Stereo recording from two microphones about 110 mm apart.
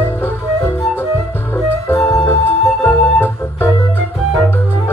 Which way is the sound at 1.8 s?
25° left (ahead or behind).